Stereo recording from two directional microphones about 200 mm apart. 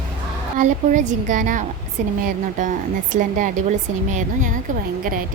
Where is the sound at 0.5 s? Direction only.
40° right (ahead or behind).